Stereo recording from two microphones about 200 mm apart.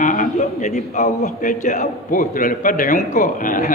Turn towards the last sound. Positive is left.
turn(degrees=40)  # may be behind; listen again after turning